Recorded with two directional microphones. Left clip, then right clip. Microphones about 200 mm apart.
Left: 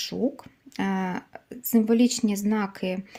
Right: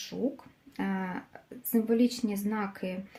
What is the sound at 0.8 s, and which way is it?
A woman's voice, 50° left (ahead or behind).